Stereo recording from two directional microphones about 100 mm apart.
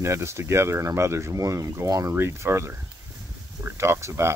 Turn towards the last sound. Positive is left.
turn(degrees=-25)  # may be behind; listen again after turning